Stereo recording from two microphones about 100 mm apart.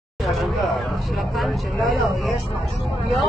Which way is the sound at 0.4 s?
Centre (ahead or behind).